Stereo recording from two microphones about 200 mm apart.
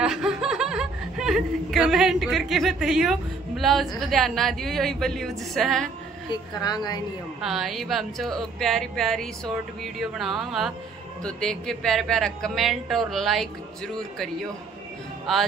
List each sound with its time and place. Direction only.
0.0 s speech: centre (ahead or behind)
6.3 s a woman's voice: 20° left (ahead or behind)
7.4 s speech: centre (ahead or behind)